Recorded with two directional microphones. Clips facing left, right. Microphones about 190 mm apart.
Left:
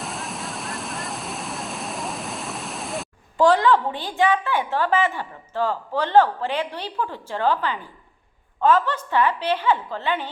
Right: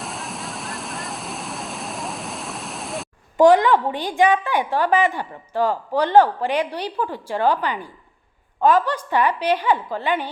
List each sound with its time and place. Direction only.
0.0 s waves: centre (ahead or behind)
3.3 s a woman's voice: 20° right (ahead or behind)